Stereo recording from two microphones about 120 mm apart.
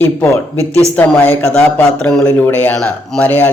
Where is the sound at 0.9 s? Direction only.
15° left (ahead or behind).